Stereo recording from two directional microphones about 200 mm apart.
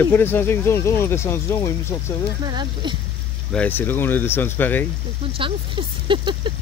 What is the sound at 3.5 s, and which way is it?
Speech, 10° left (ahead or behind).